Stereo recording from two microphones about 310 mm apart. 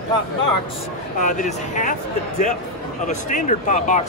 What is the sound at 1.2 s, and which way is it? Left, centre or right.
Speech, left.